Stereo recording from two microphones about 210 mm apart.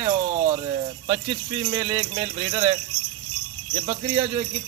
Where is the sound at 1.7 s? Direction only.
20° right (ahead or behind).